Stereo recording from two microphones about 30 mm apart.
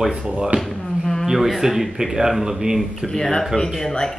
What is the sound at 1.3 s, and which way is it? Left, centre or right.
Speech, centre.